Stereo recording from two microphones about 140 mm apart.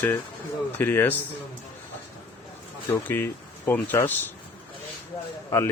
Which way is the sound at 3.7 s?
15° left (ahead or behind).